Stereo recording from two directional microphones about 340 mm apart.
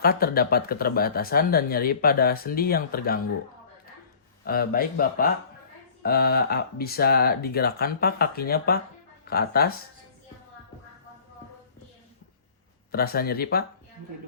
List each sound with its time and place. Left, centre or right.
0.0 s speech: left
4.4 s speech: left
12.9 s speech: left